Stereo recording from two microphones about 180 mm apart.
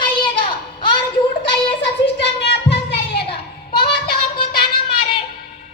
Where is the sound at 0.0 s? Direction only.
25° left (ahead or behind).